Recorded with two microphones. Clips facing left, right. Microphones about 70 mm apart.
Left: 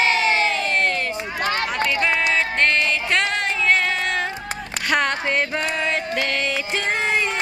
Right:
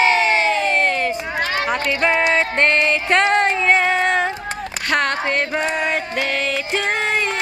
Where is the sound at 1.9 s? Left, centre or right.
Right.